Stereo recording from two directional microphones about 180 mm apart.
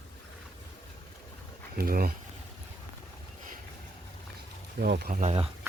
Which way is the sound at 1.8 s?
55° right (ahead or behind).